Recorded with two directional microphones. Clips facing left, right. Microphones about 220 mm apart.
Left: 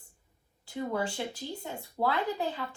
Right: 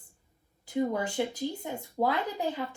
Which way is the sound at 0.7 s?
15° right (ahead or behind).